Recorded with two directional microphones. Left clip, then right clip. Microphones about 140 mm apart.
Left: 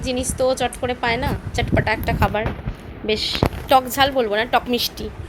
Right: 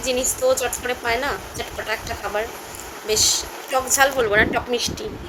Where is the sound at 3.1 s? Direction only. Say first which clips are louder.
Even; 20° left (ahead or behind).